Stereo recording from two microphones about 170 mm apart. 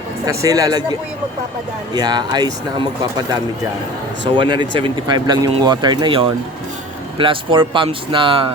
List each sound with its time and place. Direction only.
0.3 s speech: 20° right (ahead or behind)